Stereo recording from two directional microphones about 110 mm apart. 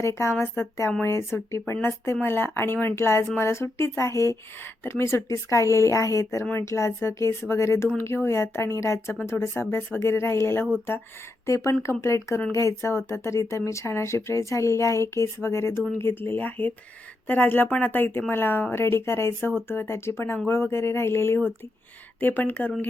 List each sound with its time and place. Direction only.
0.0 s speech: 25° left (ahead or behind)